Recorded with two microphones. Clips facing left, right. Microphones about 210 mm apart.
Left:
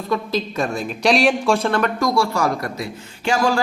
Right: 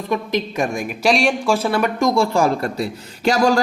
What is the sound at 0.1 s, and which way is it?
Speech, 20° right (ahead or behind).